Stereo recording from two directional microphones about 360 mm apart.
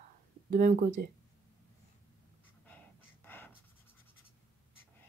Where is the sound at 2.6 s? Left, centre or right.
Centre.